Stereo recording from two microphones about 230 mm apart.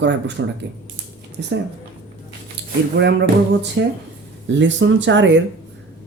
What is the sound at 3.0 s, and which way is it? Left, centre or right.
Speech, right.